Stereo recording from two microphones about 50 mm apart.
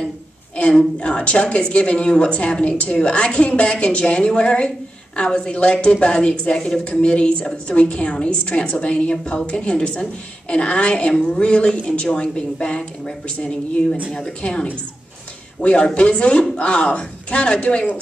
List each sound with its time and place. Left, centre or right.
0.6 s a woman's voice: left